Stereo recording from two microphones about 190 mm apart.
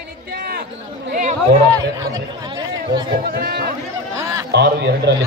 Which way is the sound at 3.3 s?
55° right (ahead or behind).